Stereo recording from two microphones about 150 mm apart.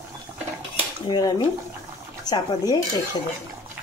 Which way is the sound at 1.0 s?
25° left (ahead or behind).